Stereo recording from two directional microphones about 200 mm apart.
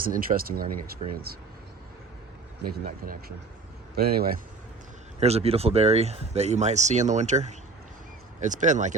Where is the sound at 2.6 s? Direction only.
45° right (ahead or behind).